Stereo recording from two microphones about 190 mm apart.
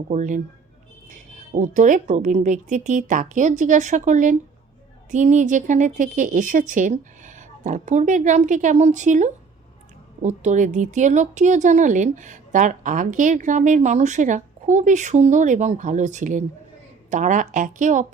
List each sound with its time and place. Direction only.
0.1 s speech: 40° right (ahead or behind)
1.5 s speech: 40° right (ahead or behind)